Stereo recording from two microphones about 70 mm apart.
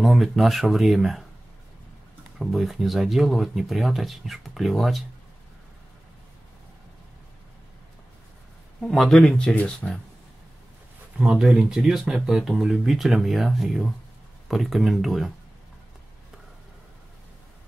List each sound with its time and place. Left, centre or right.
0.0 s speech: centre
2.3 s speech: centre
8.8 s speech: centre
11.1 s speech: centre